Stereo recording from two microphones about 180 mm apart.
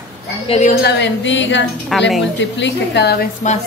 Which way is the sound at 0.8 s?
90° left.